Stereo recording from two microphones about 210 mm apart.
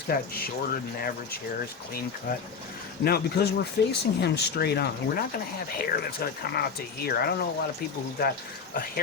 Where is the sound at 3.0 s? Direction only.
50° left (ahead or behind).